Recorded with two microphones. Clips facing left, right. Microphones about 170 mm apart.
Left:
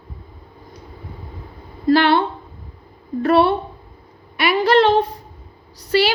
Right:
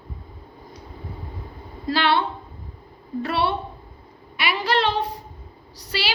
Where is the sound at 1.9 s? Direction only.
50° left (ahead or behind).